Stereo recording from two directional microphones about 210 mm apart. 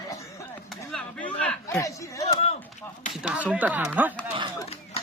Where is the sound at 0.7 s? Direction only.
5° left (ahead or behind).